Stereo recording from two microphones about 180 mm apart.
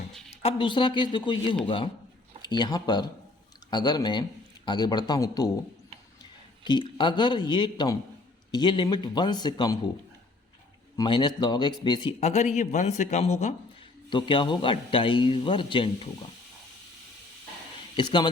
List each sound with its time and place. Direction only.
0.4 s a man's voice: 25° left (ahead or behind)
6.7 s a man's voice: 25° left (ahead or behind)
10.9 s a man's voice: 25° left (ahead or behind)
12.2 s speech: 40° left (ahead or behind)
14.1 s a man's voice: 25° left (ahead or behind)
17.9 s speech: 25° left (ahead or behind)